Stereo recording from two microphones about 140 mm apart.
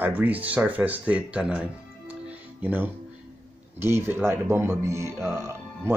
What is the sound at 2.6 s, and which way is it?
Speech, 15° right (ahead or behind).